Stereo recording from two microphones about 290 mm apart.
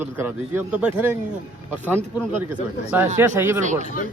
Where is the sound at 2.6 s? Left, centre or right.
Left.